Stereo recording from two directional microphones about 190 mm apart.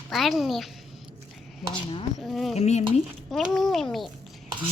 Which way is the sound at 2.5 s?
35° left (ahead or behind).